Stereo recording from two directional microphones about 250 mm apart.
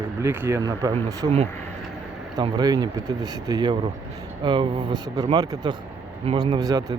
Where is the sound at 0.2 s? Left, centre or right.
Centre.